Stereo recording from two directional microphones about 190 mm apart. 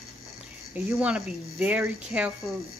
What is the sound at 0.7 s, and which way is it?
Speech, 5° right (ahead or behind).